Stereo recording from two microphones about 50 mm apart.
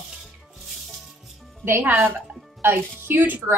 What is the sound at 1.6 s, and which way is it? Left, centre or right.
A woman's voice, right.